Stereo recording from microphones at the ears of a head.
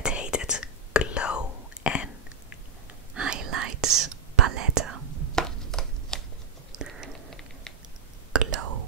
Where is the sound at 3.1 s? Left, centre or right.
Right.